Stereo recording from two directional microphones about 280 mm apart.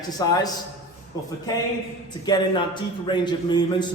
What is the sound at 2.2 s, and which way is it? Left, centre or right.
A man's voice, centre.